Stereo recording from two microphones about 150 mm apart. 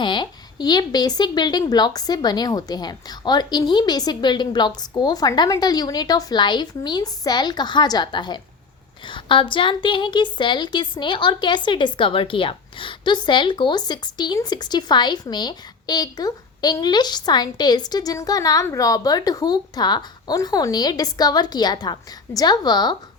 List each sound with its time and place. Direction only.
0.0 s a woman's voice: 30° left (ahead or behind)